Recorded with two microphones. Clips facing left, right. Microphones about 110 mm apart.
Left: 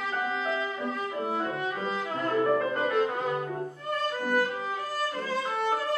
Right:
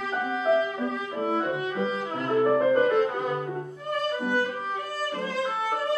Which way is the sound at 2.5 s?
10° right (ahead or behind).